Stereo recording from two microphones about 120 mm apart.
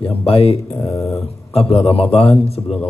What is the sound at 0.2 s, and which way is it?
Speech, 55° left (ahead or behind).